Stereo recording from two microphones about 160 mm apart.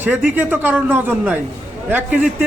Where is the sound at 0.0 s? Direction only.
10° right (ahead or behind).